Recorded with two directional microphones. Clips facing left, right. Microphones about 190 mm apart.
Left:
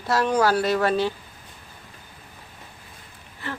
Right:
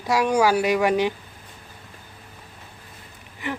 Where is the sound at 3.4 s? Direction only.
15° right (ahead or behind).